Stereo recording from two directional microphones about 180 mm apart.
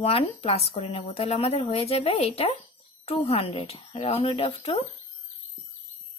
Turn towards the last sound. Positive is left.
turn(degrees=35)  # may be behind; listen again after turning